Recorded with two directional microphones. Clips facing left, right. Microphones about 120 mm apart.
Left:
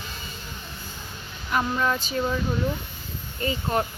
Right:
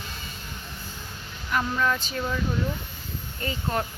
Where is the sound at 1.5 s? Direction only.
20° left (ahead or behind).